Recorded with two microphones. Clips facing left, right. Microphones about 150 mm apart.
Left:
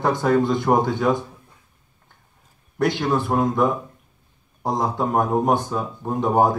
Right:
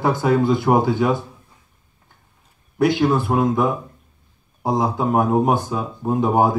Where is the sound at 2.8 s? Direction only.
Centre (ahead or behind).